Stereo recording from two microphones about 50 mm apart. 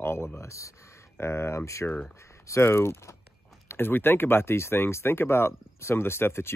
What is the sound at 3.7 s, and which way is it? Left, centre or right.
Speech, left.